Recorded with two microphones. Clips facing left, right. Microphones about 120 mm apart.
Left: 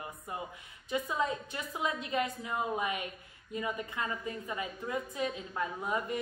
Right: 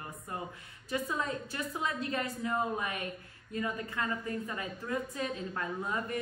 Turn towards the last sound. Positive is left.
turn(degrees=15)  # may be behind; listen again after turning